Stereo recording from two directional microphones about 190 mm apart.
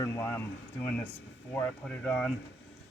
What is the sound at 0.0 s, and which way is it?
Speech, 15° left (ahead or behind).